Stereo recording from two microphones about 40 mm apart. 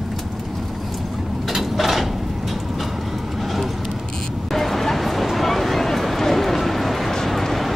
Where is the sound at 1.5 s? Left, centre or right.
Centre.